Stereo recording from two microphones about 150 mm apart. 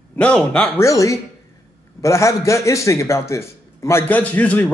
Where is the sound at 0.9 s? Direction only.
20° left (ahead or behind).